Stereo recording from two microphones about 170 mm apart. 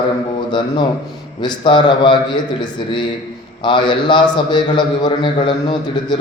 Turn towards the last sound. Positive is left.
turn(degrees=25)  # may be behind; listen again after turning